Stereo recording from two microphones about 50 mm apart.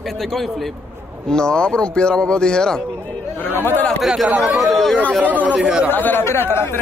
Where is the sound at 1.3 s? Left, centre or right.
Centre.